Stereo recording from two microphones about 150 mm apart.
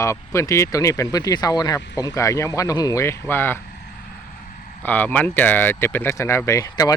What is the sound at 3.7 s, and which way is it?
Vehicle, 90° left.